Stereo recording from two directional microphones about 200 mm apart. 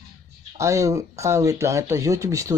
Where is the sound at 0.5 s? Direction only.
15° right (ahead or behind).